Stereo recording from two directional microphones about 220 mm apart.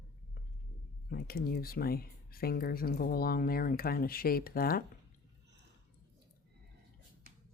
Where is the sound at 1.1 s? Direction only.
40° left (ahead or behind).